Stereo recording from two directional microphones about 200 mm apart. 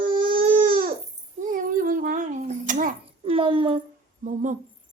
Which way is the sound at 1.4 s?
45° right (ahead or behind).